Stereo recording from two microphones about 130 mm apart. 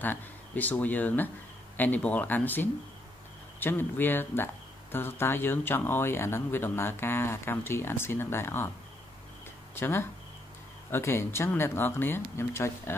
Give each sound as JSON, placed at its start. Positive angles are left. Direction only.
{"t": 0.0, "sound": "speech", "side_deg": 15}
{"t": 9.8, "sound": "speech", "side_deg": 20}